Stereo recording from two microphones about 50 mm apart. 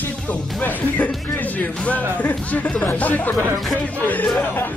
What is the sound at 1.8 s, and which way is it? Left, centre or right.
Speech, left.